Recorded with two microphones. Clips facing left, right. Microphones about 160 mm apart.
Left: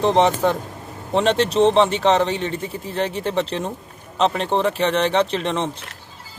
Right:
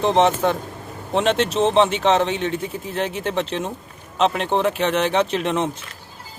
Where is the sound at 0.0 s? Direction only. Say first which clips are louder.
Left 1 dB; centre (ahead or behind).